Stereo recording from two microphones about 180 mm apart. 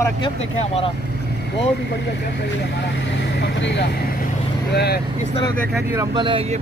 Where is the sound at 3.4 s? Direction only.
70° left (ahead or behind).